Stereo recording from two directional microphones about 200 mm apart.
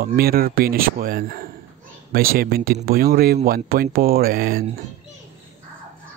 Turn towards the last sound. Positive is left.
turn(degrees=-45)  # may be behind; listen again after turning